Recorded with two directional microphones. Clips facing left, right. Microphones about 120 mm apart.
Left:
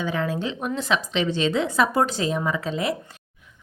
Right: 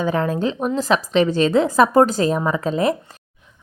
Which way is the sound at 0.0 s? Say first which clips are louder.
Right 6 dB; 40° right (ahead or behind).